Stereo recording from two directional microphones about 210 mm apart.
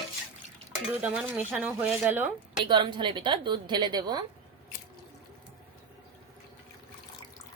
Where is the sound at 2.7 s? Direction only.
20° right (ahead or behind).